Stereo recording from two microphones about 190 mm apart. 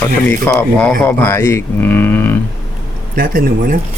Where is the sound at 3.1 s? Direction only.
50° right (ahead or behind).